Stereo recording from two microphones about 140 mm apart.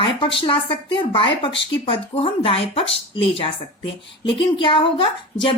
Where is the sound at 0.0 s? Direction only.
40° left (ahead or behind).